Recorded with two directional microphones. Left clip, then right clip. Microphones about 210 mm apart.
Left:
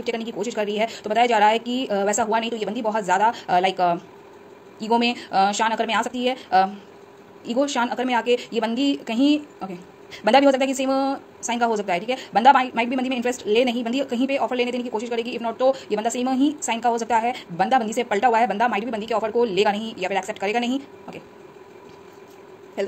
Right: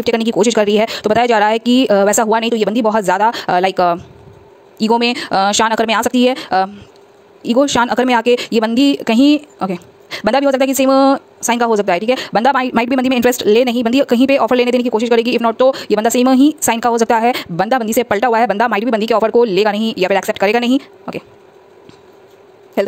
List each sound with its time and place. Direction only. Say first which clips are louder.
0.0 s speech: right 13 dB; 50° right (ahead or behind)
22.8 s speech: right 10 dB; 50° right (ahead or behind)